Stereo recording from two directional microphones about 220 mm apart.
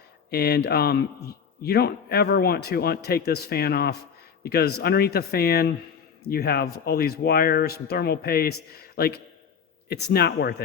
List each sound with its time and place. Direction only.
0.3 s a man's voice: 45° left (ahead or behind)